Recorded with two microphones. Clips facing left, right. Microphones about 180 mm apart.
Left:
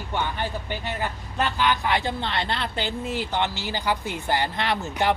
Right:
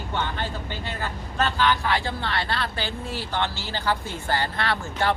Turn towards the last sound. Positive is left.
turn(degrees=15)  # may be behind; listen again after turning